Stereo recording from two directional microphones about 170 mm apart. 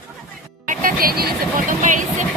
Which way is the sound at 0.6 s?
55° right (ahead or behind).